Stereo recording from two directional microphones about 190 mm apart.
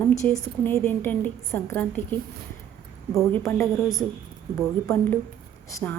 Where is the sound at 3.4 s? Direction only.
15° left (ahead or behind).